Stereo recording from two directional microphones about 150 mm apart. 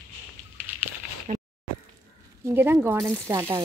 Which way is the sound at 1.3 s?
50° right (ahead or behind).